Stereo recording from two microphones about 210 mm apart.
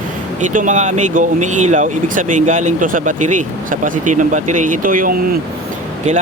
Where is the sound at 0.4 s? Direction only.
35° right (ahead or behind).